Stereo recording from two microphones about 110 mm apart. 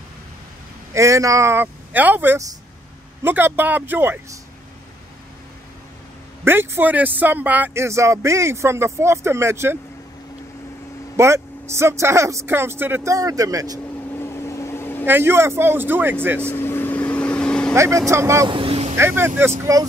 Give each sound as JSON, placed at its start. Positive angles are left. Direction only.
{"t": 0.9, "sound": "speech", "side_deg": -30}
{"t": 6.4, "sound": "speech", "side_deg": -20}
{"t": 11.1, "sound": "speech", "side_deg": -25}
{"t": 14.2, "sound": "vehicle", "side_deg": 25}
{"t": 15.0, "sound": "speech", "side_deg": -20}
{"t": 16.4, "sound": "vehicle", "side_deg": 20}
{"t": 17.7, "sound": "speech", "side_deg": -25}
{"t": 18.5, "sound": "vehicle", "side_deg": -60}
{"t": 18.9, "sound": "speech", "side_deg": -20}
{"t": 19.6, "sound": "speech", "side_deg": -35}